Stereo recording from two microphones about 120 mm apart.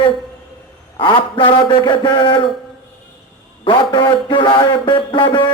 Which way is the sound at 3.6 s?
45° left (ahead or behind).